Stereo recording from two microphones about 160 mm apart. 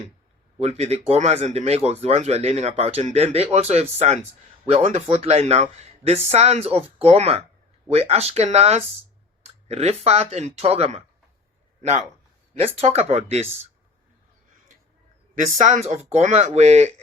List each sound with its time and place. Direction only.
0.6 s speech: 40° right (ahead or behind)
12.5 s speech: 40° right (ahead or behind)
15.4 s speech: 50° right (ahead or behind)